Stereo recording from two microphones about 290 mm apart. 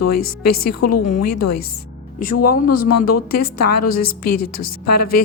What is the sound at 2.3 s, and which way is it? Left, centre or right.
Speech, left.